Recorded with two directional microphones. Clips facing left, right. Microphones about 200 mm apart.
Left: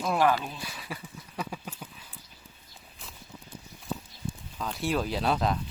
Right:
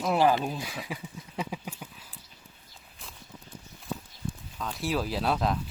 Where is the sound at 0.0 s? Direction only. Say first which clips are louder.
Right 2 dB; 25° right (ahead or behind).